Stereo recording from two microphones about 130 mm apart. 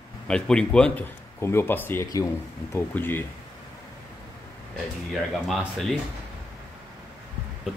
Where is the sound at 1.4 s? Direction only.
20° left (ahead or behind).